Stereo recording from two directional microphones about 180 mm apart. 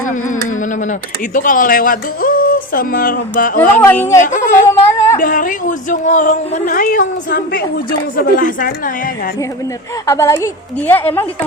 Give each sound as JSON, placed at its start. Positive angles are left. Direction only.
{"t": 0.0, "sound": "a woman's voice", "side_deg": 45}
{"t": 3.6, "sound": "a woman's voice", "side_deg": 10}
{"t": 4.2, "sound": "a woman's voice", "side_deg": 45}
{"t": 4.7, "sound": "a sound", "side_deg": 15}
{"t": 5.2, "sound": "a woman's voice", "side_deg": 50}
{"t": 10.1, "sound": "a woman's voice", "side_deg": 15}